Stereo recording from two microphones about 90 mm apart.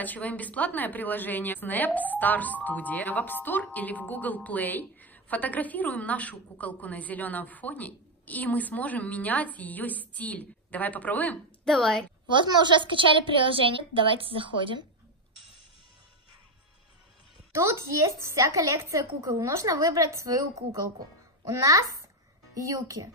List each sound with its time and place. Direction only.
0.0 s a woman's voice: 15° left (ahead or behind)
11.6 s speech: 5° left (ahead or behind)
12.3 s a woman's voice: 60° right (ahead or behind)
17.5 s a woman's voice: 30° right (ahead or behind)